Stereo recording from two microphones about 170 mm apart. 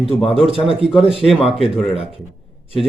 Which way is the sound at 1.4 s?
35° left (ahead or behind).